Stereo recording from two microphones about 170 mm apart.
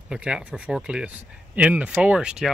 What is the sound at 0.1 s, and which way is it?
Speech, 5° right (ahead or behind).